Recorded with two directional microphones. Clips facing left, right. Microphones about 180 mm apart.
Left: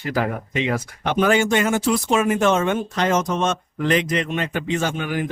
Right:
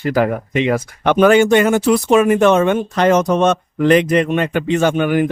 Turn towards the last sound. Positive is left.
turn(degrees=-60)  # may be behind; listen again after turning